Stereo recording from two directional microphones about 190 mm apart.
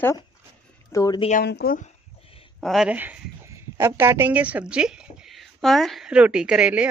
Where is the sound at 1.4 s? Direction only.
60° left (ahead or behind).